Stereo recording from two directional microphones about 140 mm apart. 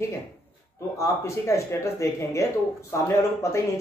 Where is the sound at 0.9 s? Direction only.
20° left (ahead or behind).